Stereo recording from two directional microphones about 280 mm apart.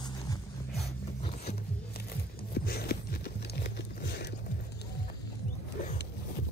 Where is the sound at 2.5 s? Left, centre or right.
Left.